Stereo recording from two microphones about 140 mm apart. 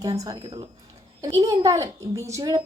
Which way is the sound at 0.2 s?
25° right (ahead or behind).